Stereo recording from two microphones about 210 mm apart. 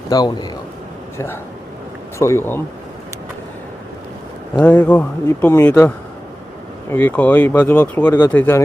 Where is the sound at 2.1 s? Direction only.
15° left (ahead or behind).